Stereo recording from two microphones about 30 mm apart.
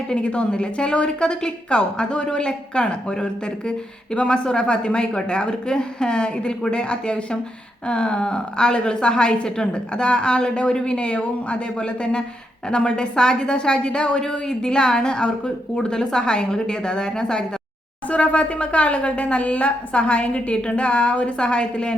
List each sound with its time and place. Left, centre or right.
0.2 s a woman's voice: left
10.9 s a woman's voice: left
18.3 s a woman's voice: left